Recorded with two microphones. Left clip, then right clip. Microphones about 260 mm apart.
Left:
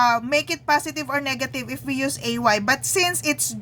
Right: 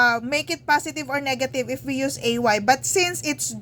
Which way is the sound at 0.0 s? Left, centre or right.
Left.